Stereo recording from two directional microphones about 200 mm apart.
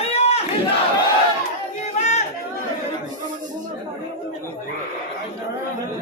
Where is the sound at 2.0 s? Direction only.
35° left (ahead or behind).